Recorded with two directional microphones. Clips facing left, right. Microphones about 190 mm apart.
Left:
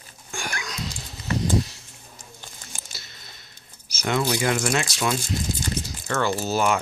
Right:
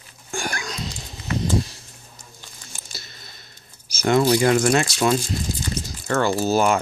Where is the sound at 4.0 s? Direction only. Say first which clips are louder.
Right 7 dB; 40° right (ahead or behind).